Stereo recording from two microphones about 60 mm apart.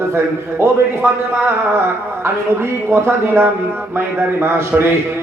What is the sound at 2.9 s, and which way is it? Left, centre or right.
A man's voice, right.